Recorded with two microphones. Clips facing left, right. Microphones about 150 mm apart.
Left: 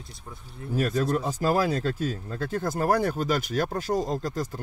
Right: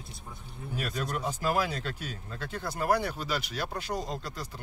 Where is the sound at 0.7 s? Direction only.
40° left (ahead or behind).